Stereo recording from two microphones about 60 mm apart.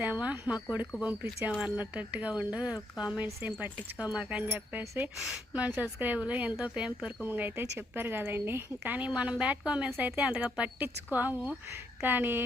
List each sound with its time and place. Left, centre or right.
0.0 s speech: right
5.1 s speech: centre
5.5 s speech: right
7.3 s a woman's voice: right